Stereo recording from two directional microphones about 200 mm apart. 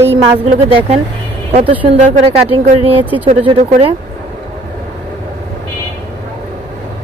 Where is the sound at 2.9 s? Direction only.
10° right (ahead or behind).